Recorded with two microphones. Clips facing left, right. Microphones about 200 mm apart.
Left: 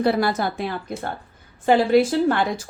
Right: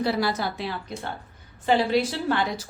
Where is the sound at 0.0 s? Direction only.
55° left (ahead or behind).